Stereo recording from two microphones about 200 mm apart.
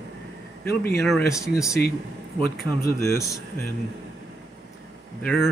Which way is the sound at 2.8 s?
15° left (ahead or behind).